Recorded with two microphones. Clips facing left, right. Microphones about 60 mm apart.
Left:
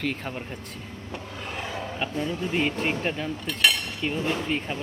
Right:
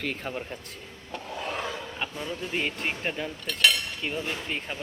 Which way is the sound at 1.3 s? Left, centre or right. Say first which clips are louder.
Right 4 dB; centre.